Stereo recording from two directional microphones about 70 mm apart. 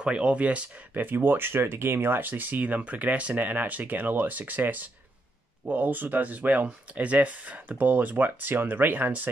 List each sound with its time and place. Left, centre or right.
0.0 s speech: centre